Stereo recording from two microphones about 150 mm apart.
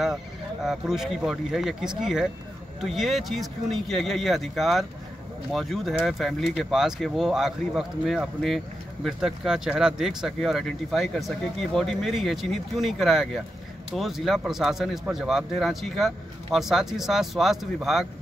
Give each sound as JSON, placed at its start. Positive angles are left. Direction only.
{"t": 0.7, "sound": "speech", "side_deg": -5}